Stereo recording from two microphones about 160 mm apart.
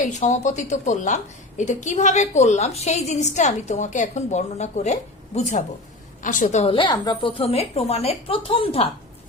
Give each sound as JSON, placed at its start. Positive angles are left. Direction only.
{"t": 0.0, "sound": "a woman's voice", "side_deg": 50}